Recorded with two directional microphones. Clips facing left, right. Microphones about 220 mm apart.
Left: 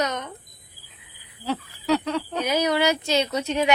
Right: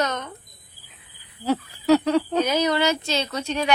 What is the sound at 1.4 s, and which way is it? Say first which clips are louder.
Speech: right 5 dB; 45° right (ahead or behind).